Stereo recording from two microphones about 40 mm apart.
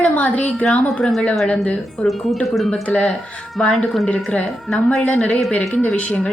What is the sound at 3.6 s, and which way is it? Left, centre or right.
A woman's voice, left.